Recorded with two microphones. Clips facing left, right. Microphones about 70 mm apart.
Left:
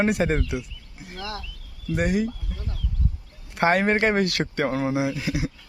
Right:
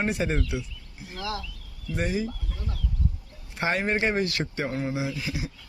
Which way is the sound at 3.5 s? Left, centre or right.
Left.